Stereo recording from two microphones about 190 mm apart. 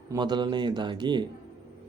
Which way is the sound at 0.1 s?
20° right (ahead or behind).